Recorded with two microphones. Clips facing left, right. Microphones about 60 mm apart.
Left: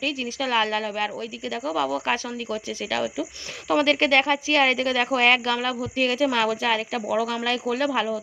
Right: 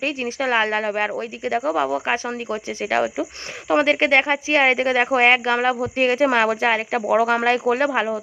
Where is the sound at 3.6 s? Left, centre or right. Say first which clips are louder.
Right 3 dB; right.